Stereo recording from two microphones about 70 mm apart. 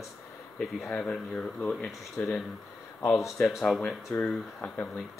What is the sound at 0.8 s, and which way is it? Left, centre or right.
Speech, centre.